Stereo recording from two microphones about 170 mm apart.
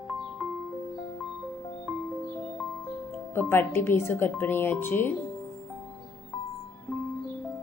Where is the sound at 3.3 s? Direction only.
15° left (ahead or behind).